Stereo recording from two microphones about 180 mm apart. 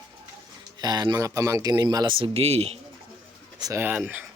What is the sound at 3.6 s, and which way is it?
Speech, 15° right (ahead or behind).